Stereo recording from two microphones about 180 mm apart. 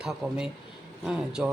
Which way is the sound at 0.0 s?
Centre (ahead or behind).